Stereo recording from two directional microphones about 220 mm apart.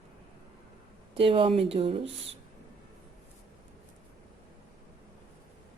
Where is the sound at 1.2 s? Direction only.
25° right (ahead or behind).